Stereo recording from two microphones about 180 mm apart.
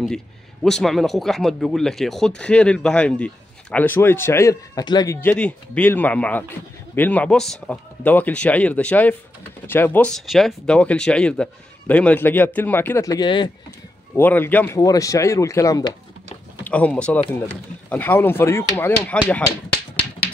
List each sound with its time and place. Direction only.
0.7 s a man's voice: centre (ahead or behind); by 13.5 s 25° left (ahead or behind)
14.1 s a man's voice: 10° left (ahead or behind)
16.6 s a man's voice: 10° left (ahead or behind)